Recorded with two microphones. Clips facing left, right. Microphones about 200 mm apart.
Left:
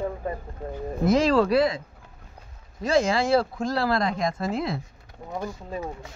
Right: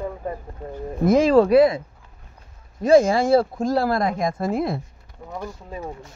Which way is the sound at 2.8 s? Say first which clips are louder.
Right 7 dB; 50° right (ahead or behind).